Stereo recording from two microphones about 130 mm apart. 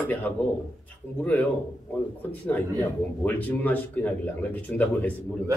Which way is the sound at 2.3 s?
15° left (ahead or behind).